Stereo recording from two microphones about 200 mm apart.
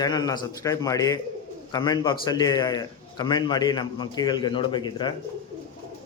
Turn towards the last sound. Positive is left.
turn(degrees=20)  # may be behind; listen again after turning